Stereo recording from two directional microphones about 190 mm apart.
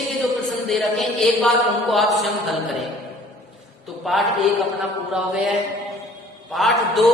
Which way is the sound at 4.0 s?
Centre (ahead or behind).